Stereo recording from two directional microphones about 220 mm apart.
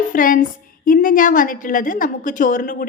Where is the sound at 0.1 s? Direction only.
40° left (ahead or behind).